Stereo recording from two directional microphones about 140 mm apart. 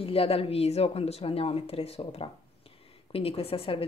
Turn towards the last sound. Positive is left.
turn(degrees=40)  # may be behind; listen again after turning